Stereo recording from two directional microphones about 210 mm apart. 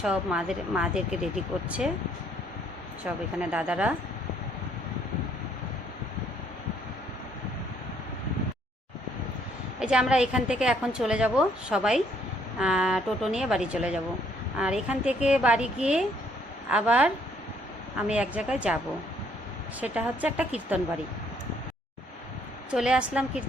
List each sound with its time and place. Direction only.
0.0 s a woman's voice: 5° right (ahead or behind)
3.0 s a woman's voice: 5° right (ahead or behind)
9.8 s a woman's voice: 5° right (ahead or behind)
18.1 s a woman's voice: 5° right (ahead or behind)
19.8 s a woman's voice: 5° right (ahead or behind)
22.7 s a woman's voice: 5° right (ahead or behind)